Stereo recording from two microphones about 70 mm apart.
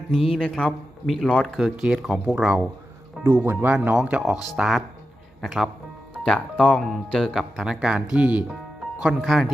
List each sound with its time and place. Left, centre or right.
0.1 s speech: centre
1.0 s speech: centre
3.2 s speech: right
3.8 s speech: centre
4.5 s speech: centre
6.2 s speech: centre
7.5 s speech: centre
9.2 s speech: centre